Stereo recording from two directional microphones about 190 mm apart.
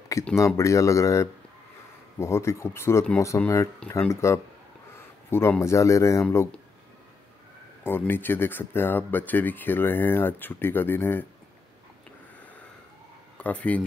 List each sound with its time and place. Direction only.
0.5 s speech: 15° left (ahead or behind)
7.8 s speech: 10° left (ahead or behind)
13.4 s speech: 5° left (ahead or behind)